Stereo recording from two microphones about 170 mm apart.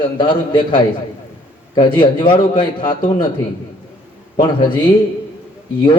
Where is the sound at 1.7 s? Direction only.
25° left (ahead or behind).